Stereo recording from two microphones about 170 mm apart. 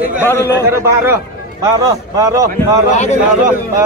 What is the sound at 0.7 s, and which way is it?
A man's voice, 15° right (ahead or behind).